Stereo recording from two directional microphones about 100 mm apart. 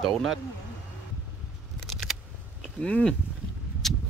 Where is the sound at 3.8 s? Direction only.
Centre (ahead or behind).